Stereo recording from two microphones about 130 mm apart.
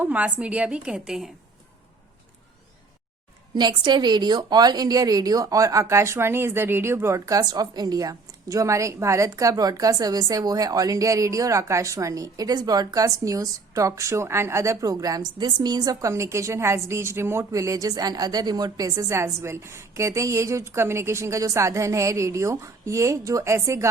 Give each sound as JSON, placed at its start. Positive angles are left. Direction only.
{"t": 0.0, "sound": "a woman's voice", "side_deg": -10}
{"t": 3.5, "sound": "speech", "side_deg": -35}